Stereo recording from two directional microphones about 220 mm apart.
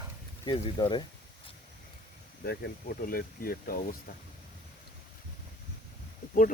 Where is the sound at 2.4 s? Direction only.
45° left (ahead or behind).